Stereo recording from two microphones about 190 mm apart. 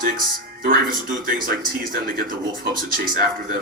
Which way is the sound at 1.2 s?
50° right (ahead or behind).